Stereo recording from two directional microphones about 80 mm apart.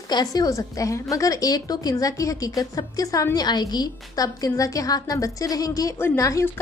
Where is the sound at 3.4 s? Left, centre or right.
Left.